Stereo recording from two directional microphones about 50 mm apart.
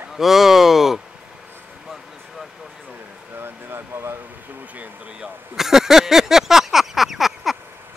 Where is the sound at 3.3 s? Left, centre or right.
Right.